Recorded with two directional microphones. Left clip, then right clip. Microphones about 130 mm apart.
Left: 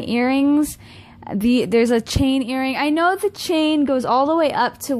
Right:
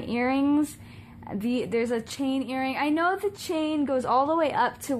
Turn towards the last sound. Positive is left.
turn(degrees=35)  # may be behind; listen again after turning